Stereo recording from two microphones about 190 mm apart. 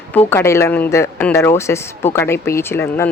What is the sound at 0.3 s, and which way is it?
Speech, 15° left (ahead or behind).